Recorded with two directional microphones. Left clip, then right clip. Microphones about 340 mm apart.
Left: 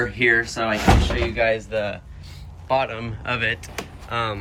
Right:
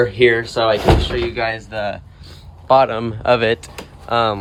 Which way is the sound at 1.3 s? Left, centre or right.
Centre.